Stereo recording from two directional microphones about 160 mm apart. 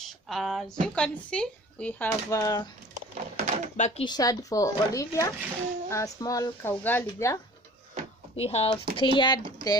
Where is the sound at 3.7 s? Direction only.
45° left (ahead or behind).